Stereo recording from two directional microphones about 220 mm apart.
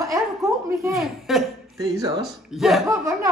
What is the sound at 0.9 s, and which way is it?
Speech, centre (ahead or behind).